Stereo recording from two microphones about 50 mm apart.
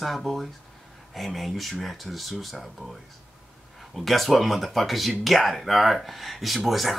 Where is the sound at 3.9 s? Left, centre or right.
Centre.